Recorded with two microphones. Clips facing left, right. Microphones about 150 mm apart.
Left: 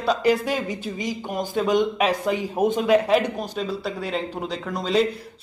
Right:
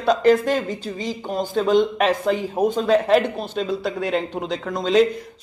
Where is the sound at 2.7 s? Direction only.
20° left (ahead or behind).